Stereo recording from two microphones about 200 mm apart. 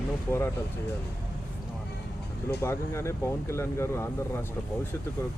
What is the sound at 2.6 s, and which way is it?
Speech, 15° left (ahead or behind).